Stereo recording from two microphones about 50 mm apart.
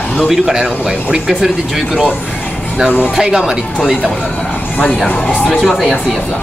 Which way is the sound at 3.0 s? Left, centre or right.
Centre.